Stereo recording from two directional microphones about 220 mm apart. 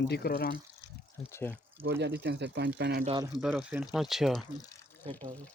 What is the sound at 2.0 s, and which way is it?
Speech, 50° right (ahead or behind).